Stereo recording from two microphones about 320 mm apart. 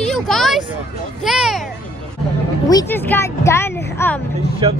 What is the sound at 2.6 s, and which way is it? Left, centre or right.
Speech, centre.